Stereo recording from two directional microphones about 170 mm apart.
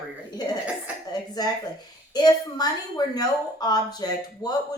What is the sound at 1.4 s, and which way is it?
A woman's voice, 25° left (ahead or behind).